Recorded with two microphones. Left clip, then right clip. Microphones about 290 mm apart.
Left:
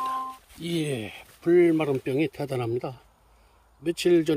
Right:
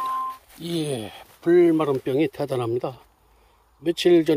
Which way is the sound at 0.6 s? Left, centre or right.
Centre.